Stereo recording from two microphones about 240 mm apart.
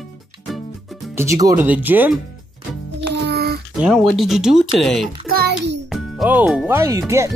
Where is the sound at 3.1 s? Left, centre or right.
Right.